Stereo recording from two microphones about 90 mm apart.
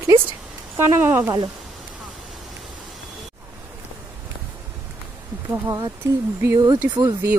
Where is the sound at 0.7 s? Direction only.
25° right (ahead or behind).